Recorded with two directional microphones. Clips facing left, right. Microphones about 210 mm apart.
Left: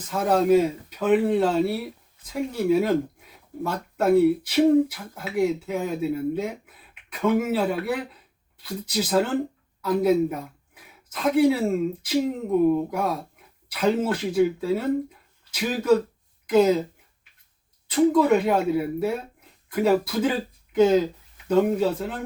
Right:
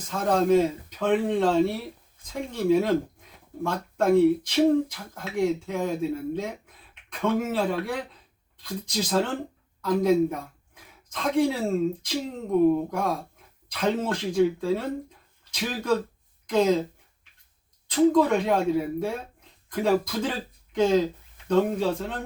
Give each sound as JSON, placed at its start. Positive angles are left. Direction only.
{"t": 0.1, "sound": "speech", "side_deg": 5}
{"t": 17.8, "sound": "speech", "side_deg": 5}